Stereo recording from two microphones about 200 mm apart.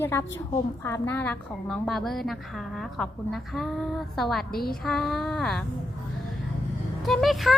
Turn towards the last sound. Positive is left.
turn(degrees=0)  # may be behind; listen again after turning